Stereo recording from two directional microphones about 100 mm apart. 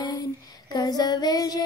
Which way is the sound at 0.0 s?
40° left (ahead or behind).